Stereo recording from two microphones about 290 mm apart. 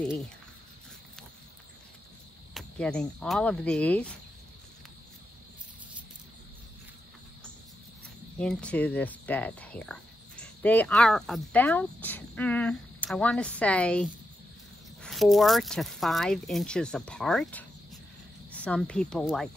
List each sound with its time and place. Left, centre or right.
2.5 s speech: centre
8.4 s speech: centre